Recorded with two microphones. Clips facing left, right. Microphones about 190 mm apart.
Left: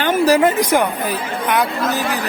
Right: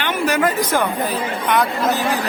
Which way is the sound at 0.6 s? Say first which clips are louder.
Left 3 dB; 15° left (ahead or behind).